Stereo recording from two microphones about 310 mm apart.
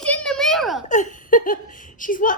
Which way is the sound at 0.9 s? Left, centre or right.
Left.